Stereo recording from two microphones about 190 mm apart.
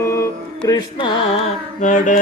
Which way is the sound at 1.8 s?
40° left (ahead or behind).